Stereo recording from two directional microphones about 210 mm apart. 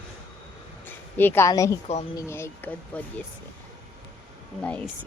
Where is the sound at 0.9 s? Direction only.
10° left (ahead or behind).